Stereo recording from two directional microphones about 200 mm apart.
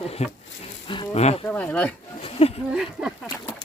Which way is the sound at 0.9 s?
30° left (ahead or behind).